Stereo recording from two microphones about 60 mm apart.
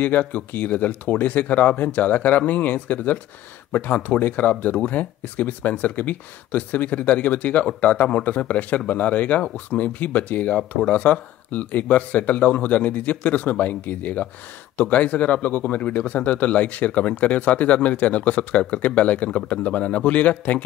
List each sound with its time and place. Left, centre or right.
0.0 s speech: left